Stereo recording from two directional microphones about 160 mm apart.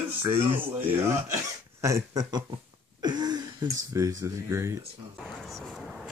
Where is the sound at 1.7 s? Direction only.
20° right (ahead or behind).